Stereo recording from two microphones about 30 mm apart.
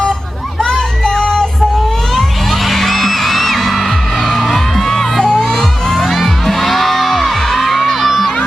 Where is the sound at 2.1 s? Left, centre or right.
Centre.